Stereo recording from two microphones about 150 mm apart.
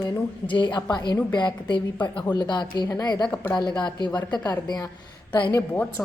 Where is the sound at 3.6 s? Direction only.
30° left (ahead or behind).